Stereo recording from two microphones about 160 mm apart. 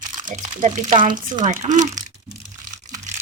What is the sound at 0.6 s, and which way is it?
A child's voice, 50° right (ahead or behind).